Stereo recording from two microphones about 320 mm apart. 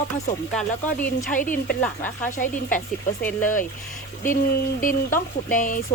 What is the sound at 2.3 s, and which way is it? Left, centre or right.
Speech, left.